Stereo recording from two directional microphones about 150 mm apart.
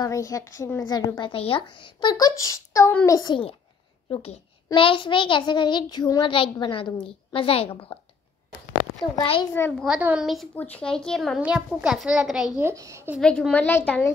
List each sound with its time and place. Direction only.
0.0 s a woman's voice: 20° left (ahead or behind)
4.7 s a child's voice: 35° left (ahead or behind)
9.2 s a child's voice: 40° left (ahead or behind)
9.8 s a child's voice: 5° right (ahead or behind)
12.5 s a child's voice: 20° right (ahead or behind)
13.2 s a woman's voice: 5° left (ahead or behind)